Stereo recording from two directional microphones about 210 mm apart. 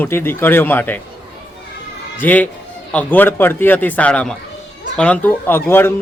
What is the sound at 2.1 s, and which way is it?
A man's voice, 10° left (ahead or behind).